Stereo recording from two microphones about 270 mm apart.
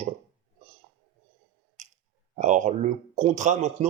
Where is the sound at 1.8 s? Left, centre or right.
Right.